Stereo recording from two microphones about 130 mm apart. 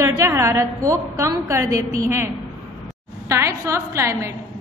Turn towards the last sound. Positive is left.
turn(degrees=-20)  # may be behind; listen again after turning